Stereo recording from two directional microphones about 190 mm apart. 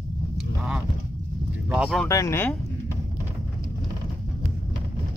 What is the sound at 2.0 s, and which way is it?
Speech, 15° left (ahead or behind).